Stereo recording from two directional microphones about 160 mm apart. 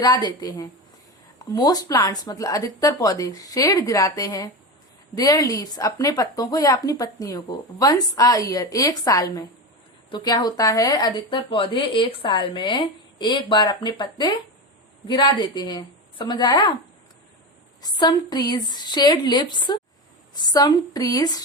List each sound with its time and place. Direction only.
0.0 s a woman's voice: 25° left (ahead or behind)
17.8 s a woman's voice: 25° left (ahead or behind)